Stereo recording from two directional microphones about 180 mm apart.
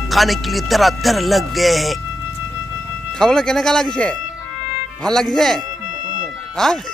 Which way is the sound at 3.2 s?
5° left (ahead or behind).